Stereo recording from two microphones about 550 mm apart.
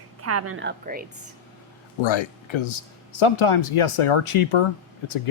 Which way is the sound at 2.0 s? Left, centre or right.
Left.